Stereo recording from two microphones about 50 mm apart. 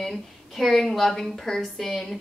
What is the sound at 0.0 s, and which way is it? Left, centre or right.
A woman's voice, centre.